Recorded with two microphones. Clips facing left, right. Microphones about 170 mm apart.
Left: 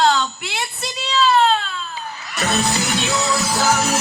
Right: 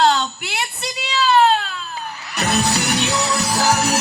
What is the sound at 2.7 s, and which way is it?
Music, 65° right (ahead or behind).